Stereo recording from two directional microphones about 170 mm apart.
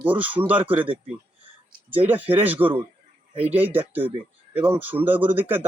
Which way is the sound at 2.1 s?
10° right (ahead or behind).